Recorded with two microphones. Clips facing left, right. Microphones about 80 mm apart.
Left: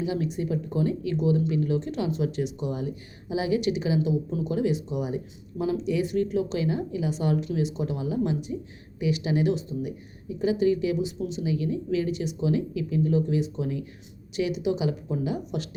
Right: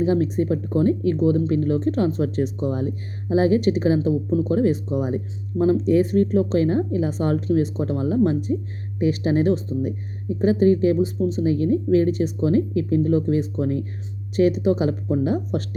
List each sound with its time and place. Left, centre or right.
0.0 s speech: right